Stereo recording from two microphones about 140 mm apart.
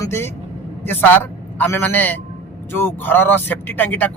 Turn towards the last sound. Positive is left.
turn(degrees=10)  # may be behind; listen again after turning